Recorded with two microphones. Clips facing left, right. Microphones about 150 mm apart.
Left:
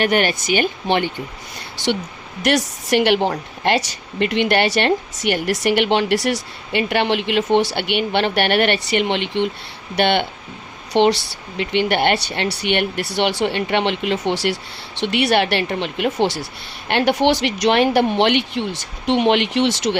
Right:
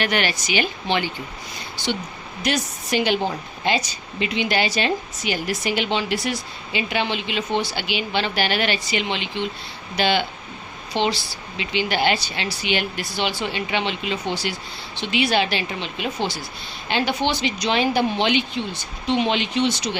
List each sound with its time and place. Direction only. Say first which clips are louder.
0.0 s speech: left 5 dB; 45° left (ahead or behind)
2.5 s a woman's voice: left 6 dB; 75° left (ahead or behind); by 16.1 s 60° left (ahead or behind)
16.2 s speech: left 7 dB; 75° left (ahead or behind)